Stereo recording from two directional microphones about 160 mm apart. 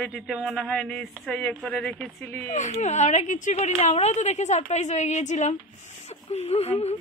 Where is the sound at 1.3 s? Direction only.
10° left (ahead or behind).